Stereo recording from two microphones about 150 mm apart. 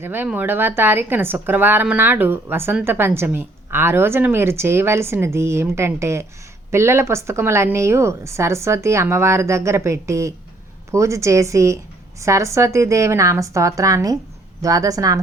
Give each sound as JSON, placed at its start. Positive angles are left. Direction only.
{"t": 0.0, "sound": "a woman's voice", "side_deg": -15}